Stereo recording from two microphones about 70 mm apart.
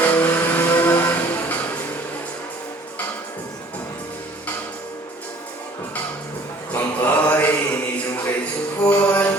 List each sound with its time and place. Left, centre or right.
0.0 s music: left
6.7 s mantra: left
8.8 s music: left